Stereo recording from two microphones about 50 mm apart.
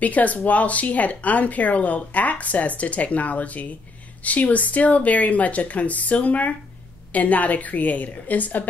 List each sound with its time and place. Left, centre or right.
0.0 s speech: left